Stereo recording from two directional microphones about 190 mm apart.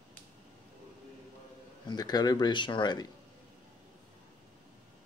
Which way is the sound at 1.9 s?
20° left (ahead or behind).